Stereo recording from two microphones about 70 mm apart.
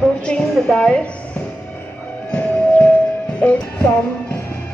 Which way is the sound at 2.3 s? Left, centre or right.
Centre.